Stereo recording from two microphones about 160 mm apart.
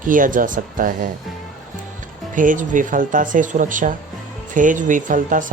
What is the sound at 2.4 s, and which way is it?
Speech, 55° right (ahead or behind).